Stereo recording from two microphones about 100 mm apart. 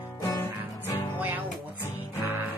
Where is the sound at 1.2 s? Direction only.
20° right (ahead or behind).